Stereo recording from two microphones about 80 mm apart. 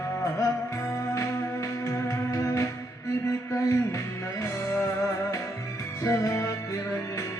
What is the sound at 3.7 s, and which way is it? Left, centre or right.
Music, left.